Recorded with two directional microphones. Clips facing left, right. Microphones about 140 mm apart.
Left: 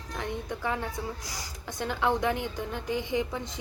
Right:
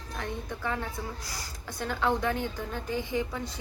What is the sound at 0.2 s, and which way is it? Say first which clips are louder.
A woman's voice: left 2 dB; 15° left (ahead or behind).